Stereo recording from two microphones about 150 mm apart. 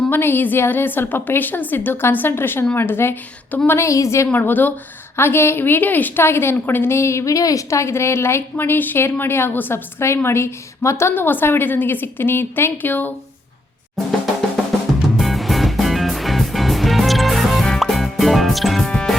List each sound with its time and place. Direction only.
0.1 s a woman's voice: 15° left (ahead or behind)
14.5 s music: centre (ahead or behind)